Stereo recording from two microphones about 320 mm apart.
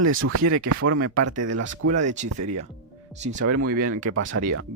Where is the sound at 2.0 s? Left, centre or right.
Right.